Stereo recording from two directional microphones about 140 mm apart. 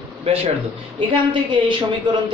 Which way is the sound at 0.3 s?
40° right (ahead or behind).